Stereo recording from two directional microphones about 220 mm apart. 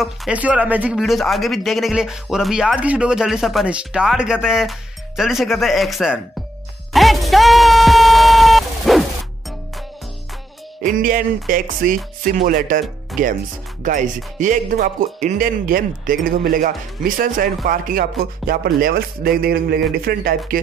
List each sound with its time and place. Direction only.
0.0 s speech: 5° right (ahead or behind)
6.9 s music: centre (ahead or behind)
10.8 s speech: 40° right (ahead or behind)